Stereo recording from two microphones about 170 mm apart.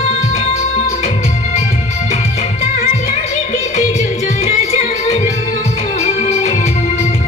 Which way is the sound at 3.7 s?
45° left (ahead or behind).